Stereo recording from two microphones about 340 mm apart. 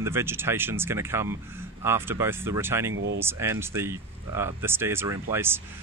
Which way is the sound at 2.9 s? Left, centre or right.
Right.